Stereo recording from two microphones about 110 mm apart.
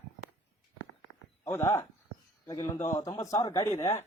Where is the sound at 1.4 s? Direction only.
25° left (ahead or behind).